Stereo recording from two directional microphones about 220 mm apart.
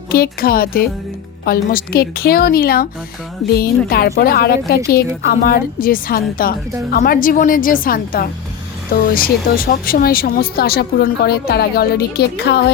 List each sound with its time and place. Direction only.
0.1 s speech: 45° left (ahead or behind)
3.8 s a woman's voice: 45° left (ahead or behind)